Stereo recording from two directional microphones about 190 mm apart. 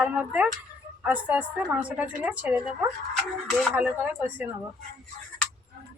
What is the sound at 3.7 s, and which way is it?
Speech, 10° right (ahead or behind).